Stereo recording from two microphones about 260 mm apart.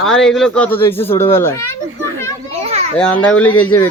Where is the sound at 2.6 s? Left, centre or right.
Right.